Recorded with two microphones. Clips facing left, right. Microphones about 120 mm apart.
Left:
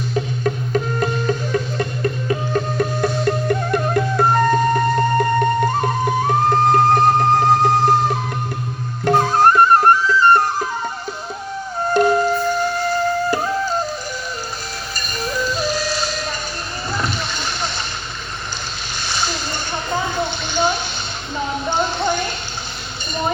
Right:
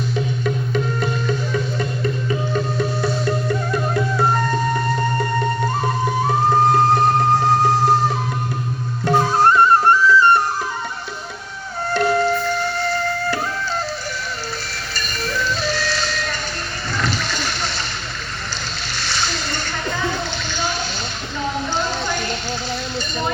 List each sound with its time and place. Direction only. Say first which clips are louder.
0.4 s music: left 2 dB; 45° left (ahead or behind)
9.0 s music: left 1 dB; 50° left (ahead or behind)
12.0 s music: left 2 dB; 15° left (ahead or behind)
14.9 s music: left 1 dB; 15° left (ahead or behind)
17.2 s splash: even; 20° left (ahead or behind)
18.9 s splash: left 1 dB; 15° left (ahead or behind)